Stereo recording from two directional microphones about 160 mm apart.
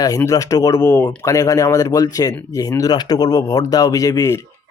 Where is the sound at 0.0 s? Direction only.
20° left (ahead or behind).